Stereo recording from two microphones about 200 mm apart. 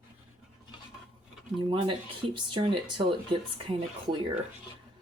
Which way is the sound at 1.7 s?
25° right (ahead or behind).